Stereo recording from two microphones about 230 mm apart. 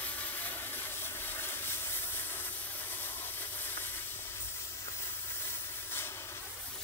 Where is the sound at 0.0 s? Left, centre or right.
Centre.